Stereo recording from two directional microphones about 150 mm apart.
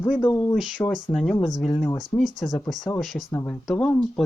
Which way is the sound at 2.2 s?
55° left (ahead or behind).